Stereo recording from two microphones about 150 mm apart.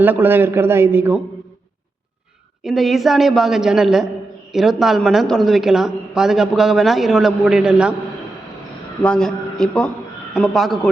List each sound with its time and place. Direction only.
0.0 s a man's voice: 15° right (ahead or behind)
2.6 s speech: centre (ahead or behind)
9.0 s speech: 5° left (ahead or behind)